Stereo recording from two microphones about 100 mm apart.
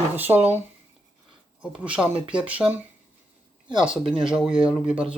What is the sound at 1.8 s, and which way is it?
Speech, 10° right (ahead or behind).